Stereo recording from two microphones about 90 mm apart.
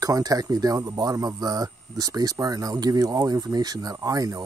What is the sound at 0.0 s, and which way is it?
Speech, 40° right (ahead or behind).